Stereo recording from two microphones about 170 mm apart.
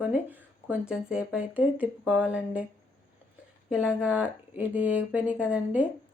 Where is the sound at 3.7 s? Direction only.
5° right (ahead or behind).